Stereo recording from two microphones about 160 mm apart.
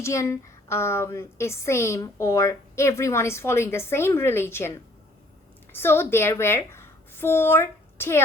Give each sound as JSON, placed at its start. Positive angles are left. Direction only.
{"t": 0.0, "sound": "a woman's voice", "side_deg": 20}
{"t": 5.7, "sound": "a woman's voice", "side_deg": 15}